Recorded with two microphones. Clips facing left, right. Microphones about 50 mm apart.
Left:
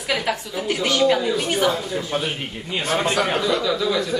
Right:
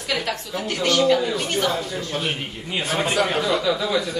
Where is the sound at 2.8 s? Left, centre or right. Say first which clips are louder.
Left 1 dB; centre.